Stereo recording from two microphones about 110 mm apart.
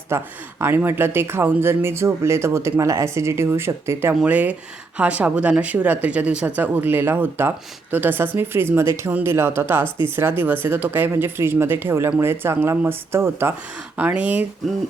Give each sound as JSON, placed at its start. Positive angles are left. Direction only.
{"t": 0.1, "sound": "speech", "side_deg": -25}
{"t": 4.1, "sound": "speech", "side_deg": -10}